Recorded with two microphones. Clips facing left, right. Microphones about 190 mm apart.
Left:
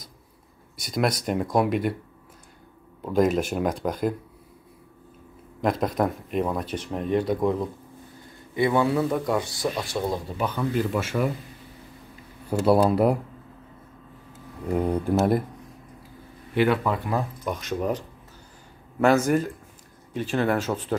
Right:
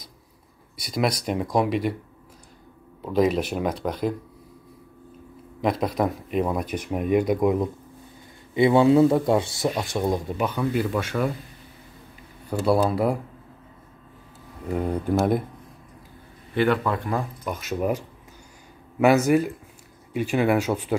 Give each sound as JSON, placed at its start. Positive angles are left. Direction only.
{"t": 0.8, "sound": "speech", "side_deg": 0}
{"t": 3.0, "sound": "speech", "side_deg": 5}
{"t": 5.6, "sound": "a man's voice", "side_deg": 0}
{"t": 10.9, "sound": "speech", "side_deg": 5}
{"t": 12.4, "sound": "speech", "side_deg": 10}
{"t": 12.9, "sound": "speech", "side_deg": -10}
{"t": 16.5, "sound": "speech", "side_deg": 10}
{"t": 17.6, "sound": "speech", "side_deg": -5}